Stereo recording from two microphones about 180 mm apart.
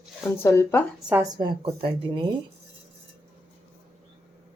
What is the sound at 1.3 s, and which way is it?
Speech, 30° right (ahead or behind).